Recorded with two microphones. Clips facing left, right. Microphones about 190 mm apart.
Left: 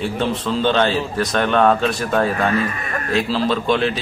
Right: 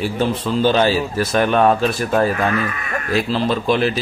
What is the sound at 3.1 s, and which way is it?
Speech, centre (ahead or behind).